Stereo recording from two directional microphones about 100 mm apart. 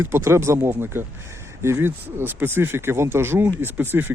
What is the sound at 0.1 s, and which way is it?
Speech, 25° right (ahead or behind).